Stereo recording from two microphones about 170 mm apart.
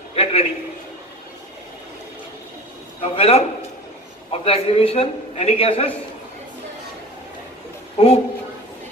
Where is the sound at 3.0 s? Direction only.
35° left (ahead or behind).